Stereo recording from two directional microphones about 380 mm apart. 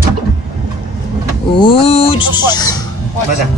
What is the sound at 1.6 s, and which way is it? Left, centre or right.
Speech, centre.